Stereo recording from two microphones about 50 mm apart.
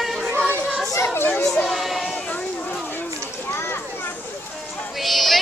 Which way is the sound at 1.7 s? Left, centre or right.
Centre.